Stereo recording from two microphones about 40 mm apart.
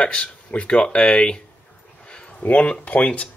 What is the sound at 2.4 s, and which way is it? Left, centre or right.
Speech, left.